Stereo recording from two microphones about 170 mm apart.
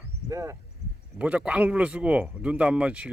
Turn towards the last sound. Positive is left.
turn(degrees=-5)  # may be behind; listen again after turning